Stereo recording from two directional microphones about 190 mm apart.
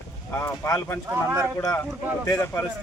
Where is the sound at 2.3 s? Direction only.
15° left (ahead or behind).